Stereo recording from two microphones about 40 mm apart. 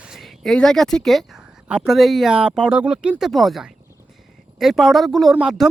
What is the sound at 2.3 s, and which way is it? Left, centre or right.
Speech, right.